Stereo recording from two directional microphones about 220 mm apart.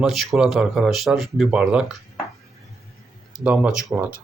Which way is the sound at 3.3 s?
5° right (ahead or behind).